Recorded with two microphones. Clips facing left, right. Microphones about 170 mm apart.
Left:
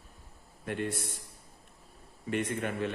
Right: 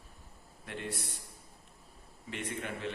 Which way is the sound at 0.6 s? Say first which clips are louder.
Left 8 dB; 50° left (ahead or behind).